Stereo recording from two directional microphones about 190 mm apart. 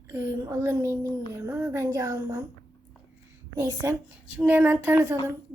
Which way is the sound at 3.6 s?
10° right (ahead or behind).